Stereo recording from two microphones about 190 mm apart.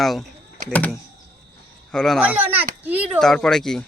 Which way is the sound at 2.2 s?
10° right (ahead or behind).